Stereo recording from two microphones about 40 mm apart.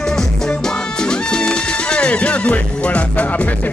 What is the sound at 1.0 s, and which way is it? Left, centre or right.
Music, left.